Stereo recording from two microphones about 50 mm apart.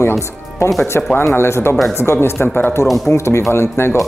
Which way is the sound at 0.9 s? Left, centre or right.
Left.